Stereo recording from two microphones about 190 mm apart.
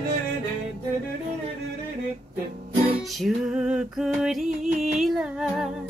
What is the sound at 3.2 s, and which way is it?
Music, 5° right (ahead or behind).